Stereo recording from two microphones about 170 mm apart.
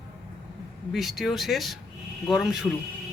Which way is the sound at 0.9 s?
Centre (ahead or behind).